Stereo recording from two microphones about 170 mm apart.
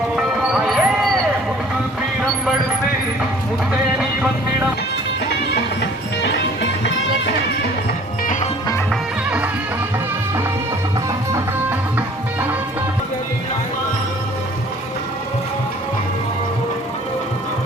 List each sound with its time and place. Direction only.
0.2 s music: 5° right (ahead or behind)
5.8 s music: 90° left
8.9 s music: 5° right (ahead or behind)